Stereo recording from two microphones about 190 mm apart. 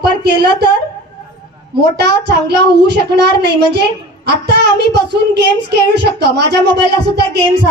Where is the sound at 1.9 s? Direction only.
60° right (ahead or behind).